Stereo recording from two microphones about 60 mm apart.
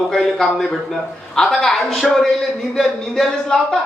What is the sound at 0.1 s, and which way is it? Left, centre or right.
A woman's voice, centre.